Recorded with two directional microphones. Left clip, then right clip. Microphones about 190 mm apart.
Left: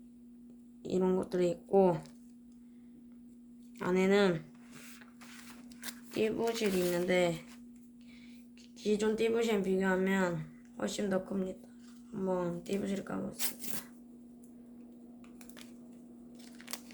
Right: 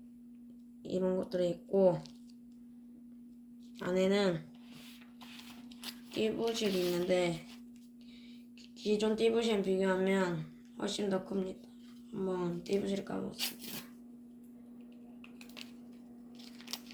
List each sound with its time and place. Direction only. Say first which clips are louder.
0.9 s speech: left 2 dB; 55° left (ahead or behind)
3.8 s speech: left 2 dB; 50° left (ahead or behind)
6.1 s speech: left 1 dB; 45° left (ahead or behind)
8.8 s speech: even; 45° left (ahead or behind)
12.3 s speech: left 1 dB; 35° left (ahead or behind)